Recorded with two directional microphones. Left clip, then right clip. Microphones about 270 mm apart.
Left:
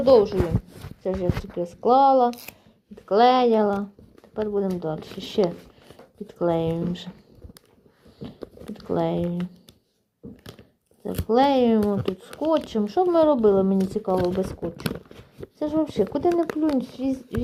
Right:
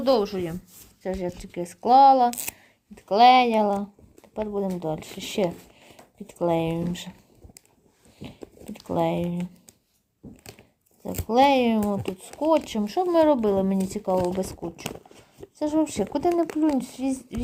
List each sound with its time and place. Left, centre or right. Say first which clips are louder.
0.0 s speech: left 6 dB; right
8.7 s speech: even; right
11.0 s speech: even; right
15.5 s speech: left 1 dB; right